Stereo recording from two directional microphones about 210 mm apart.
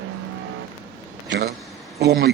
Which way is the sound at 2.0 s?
50° right (ahead or behind).